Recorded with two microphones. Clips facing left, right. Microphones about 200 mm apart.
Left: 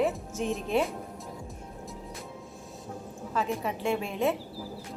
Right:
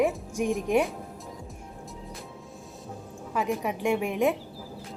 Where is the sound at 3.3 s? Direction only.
15° right (ahead or behind).